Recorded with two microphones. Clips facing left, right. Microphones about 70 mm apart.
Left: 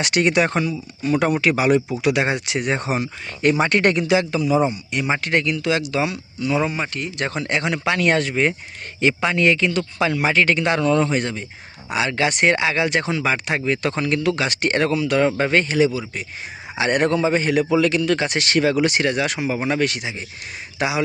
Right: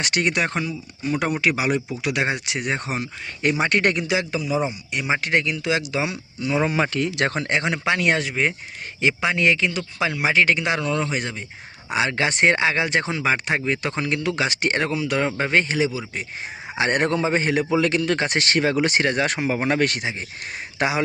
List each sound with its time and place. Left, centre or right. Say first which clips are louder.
0.0 s speech: left 4 dB; centre
3.4 s speech: left 3 dB; centre; by 6.7 s right
6.7 s speech: right 4 dB; right
7.4 s speech: left 1 dB; right
11.9 s speech: left 1 dB; right
16.7 s a man's voice: left 2 dB; right